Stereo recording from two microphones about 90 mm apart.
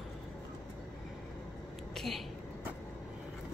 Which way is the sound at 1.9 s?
Centre (ahead or behind).